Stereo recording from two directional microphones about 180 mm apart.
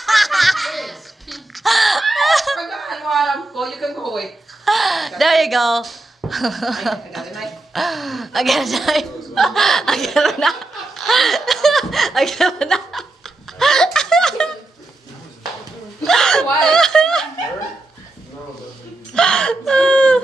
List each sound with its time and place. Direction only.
0.0 s laughter: centre (ahead or behind)
16.0 s hiccup: 5° left (ahead or behind)
16.6 s snicker: 5° left (ahead or behind)
19.1 s whimper: 5° left (ahead or behind)